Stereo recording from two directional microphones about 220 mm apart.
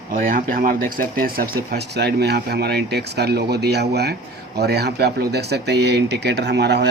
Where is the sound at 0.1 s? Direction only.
40° right (ahead or behind).